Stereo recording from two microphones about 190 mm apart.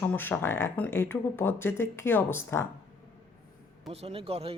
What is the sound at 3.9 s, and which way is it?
Speech, 30° right (ahead or behind).